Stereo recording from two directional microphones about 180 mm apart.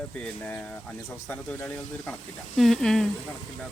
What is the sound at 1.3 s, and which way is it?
Speech, 10° left (ahead or behind).